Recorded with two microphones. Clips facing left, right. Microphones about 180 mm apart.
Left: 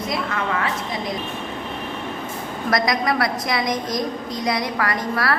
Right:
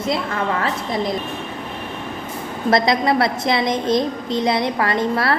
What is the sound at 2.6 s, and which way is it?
A woman's voice, 25° right (ahead or behind).